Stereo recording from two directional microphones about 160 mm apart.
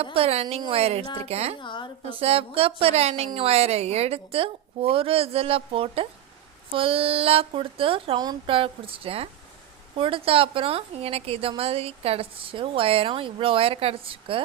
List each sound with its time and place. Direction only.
0.0 s a woman's voice: 35° right (ahead or behind)
1.6 s a woman's voice: 30° left (ahead or behind)
2.0 s a woman's voice: 35° right (ahead or behind)